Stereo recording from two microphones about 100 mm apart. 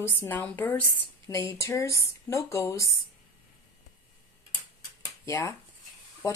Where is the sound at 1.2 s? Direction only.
30° left (ahead or behind).